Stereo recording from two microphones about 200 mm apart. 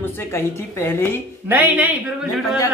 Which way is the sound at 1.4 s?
10° right (ahead or behind).